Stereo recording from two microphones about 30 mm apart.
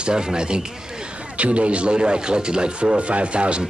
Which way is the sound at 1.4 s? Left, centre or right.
Right.